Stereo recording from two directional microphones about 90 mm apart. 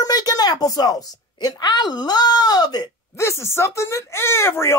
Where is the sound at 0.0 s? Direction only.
45° left (ahead or behind).